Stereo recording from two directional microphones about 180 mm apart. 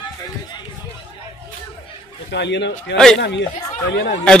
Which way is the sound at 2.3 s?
75° left (ahead or behind).